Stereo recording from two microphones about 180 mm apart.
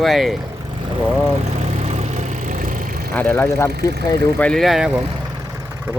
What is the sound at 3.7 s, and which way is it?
Speech, 65° right (ahead or behind).